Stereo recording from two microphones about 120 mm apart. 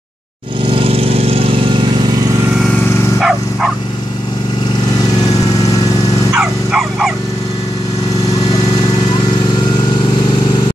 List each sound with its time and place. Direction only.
0.7 s lawn mower: 50° right (ahead or behind)
3.2 s bow-wow: 5° right (ahead or behind)
6.3 s dog: 5° right (ahead or behind)
8.8 s vehicle: 40° left (ahead or behind)